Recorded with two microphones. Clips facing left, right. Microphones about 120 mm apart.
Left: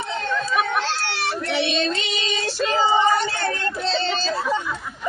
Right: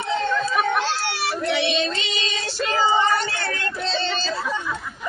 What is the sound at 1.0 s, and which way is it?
Children playing, 10° right (ahead or behind).